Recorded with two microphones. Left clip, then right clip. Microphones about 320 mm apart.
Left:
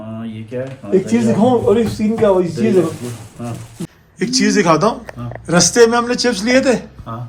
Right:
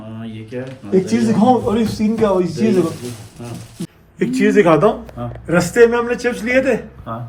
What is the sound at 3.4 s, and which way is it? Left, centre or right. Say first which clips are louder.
Speech: left 3 dB; centre.